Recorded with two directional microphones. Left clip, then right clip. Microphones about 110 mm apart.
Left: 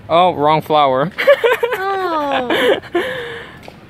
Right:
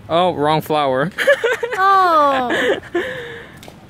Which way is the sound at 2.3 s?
Centre (ahead or behind).